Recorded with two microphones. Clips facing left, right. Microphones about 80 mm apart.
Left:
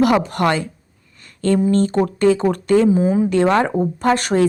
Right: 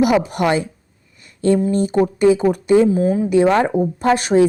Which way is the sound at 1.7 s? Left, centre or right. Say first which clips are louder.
Even; centre.